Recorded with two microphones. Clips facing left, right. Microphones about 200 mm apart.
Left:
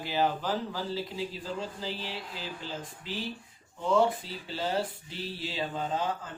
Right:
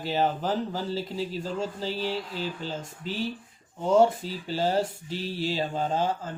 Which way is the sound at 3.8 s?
45° right (ahead or behind).